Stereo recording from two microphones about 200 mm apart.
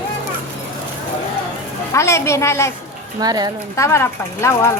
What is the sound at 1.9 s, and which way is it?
Speech, 15° left (ahead or behind).